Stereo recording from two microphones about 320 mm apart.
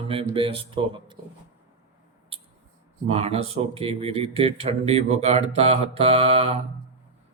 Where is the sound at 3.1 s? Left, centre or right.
Centre.